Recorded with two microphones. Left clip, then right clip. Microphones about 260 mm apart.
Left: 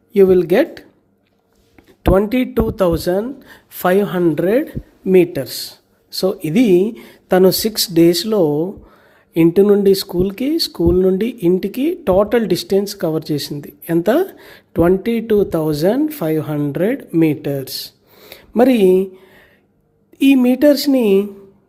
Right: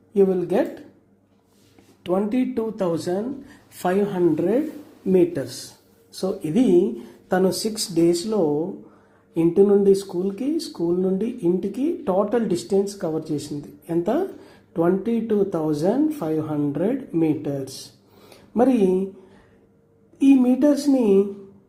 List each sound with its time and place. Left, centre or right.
0.1 s speech: left
2.0 s speech: left
20.1 s speech: left